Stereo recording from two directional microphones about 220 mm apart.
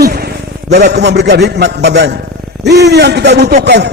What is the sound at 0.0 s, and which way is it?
A man's voice, 45° right (ahead or behind).